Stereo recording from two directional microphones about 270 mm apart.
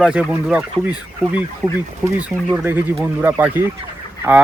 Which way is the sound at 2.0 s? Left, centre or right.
Centre.